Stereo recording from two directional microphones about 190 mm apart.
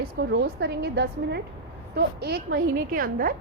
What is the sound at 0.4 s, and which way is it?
A woman's voice, 60° right (ahead or behind).